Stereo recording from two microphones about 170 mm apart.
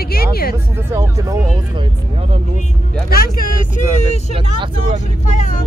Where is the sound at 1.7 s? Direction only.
30° right (ahead or behind).